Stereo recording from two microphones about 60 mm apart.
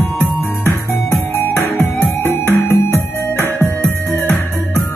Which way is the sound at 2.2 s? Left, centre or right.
Left.